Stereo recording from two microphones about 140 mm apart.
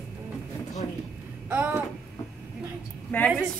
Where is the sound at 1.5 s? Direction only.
15° right (ahead or behind).